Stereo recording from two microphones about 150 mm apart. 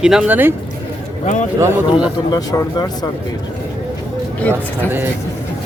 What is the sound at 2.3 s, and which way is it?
Speech, 25° left (ahead or behind).